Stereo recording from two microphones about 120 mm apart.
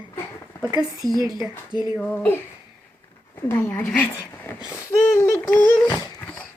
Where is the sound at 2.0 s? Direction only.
5° left (ahead or behind).